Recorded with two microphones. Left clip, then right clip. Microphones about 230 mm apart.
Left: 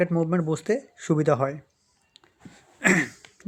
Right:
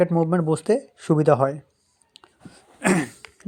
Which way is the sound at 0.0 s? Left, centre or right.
Centre.